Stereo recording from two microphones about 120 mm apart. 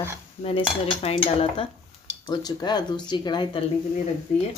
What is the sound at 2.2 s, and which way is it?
Speech, 35° left (ahead or behind).